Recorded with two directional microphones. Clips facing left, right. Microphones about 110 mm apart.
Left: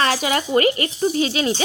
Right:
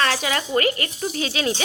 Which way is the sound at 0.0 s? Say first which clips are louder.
Left 3 dB; 15° left (ahead or behind).